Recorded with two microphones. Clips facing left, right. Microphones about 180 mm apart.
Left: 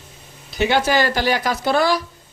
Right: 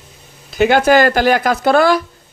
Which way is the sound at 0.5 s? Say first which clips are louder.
Right 7 dB; 50° right (ahead or behind).